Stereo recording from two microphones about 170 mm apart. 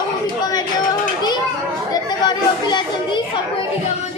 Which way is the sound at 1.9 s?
25° left (ahead or behind).